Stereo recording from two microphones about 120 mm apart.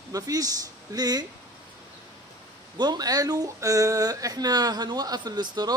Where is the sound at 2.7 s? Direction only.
35° right (ahead or behind).